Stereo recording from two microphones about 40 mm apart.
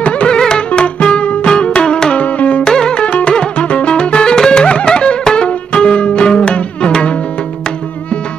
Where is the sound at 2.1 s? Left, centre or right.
Left.